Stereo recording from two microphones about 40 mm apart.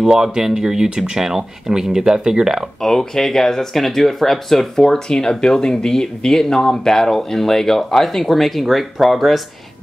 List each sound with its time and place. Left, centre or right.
0.0 s speech: centre
2.8 s speech: centre